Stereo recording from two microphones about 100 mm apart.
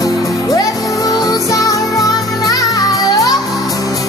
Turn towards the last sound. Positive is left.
turn(degrees=35)  # may be behind; listen again after turning